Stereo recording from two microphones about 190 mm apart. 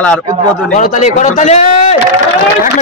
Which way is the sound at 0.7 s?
40° left (ahead or behind).